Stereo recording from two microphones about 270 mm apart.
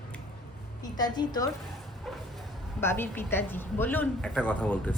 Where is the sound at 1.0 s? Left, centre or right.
Centre.